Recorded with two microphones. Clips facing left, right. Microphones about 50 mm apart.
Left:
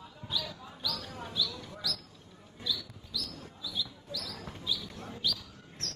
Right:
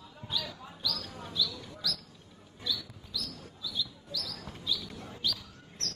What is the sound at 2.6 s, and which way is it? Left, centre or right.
Roaring cats, centre.